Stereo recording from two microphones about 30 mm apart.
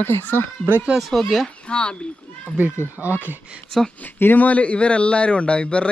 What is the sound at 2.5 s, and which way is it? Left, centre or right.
Speech, right.